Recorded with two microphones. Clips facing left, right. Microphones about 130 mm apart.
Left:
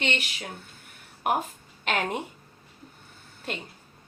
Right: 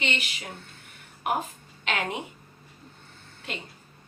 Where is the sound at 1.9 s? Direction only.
50° left (ahead or behind).